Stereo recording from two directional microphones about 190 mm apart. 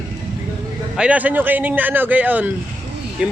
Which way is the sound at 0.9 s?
5° right (ahead or behind).